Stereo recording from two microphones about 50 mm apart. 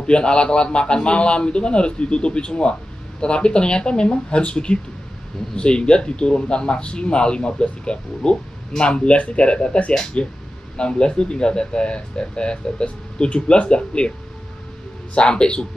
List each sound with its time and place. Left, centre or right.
0.0 s speech: centre
15.1 s speech: centre